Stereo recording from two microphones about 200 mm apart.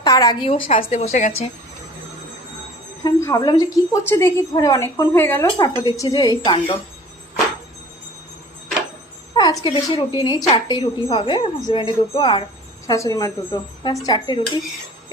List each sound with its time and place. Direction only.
0.0 s speech: 20° left (ahead or behind); by 1.3 s 35° left (ahead or behind)
3.0 s a woman's voice: 15° left (ahead or behind)
9.3 s speech: 20° left (ahead or behind)